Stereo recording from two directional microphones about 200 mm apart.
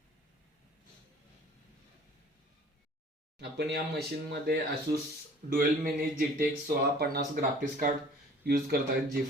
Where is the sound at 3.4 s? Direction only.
55° right (ahead or behind).